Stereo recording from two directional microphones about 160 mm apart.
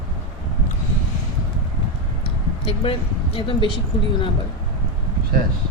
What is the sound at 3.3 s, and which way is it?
Speech, 35° left (ahead or behind).